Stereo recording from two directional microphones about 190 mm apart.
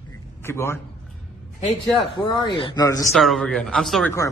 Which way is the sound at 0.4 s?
15° left (ahead or behind).